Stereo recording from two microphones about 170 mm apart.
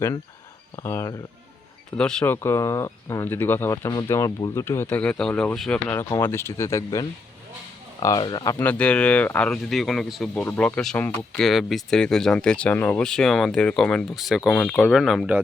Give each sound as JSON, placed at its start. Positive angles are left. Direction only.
{"t": 0.8, "sound": "speech", "side_deg": 15}
{"t": 2.0, "sound": "speech", "side_deg": 5}